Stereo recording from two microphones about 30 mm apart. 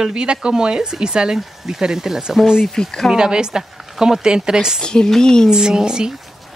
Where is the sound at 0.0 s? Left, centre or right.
Right.